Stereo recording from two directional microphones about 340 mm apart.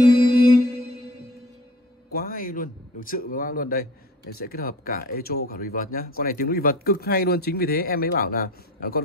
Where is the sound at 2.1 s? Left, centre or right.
Left.